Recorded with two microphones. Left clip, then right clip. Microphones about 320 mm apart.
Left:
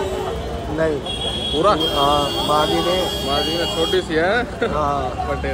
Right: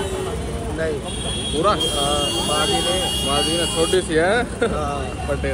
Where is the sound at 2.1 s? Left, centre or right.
Centre.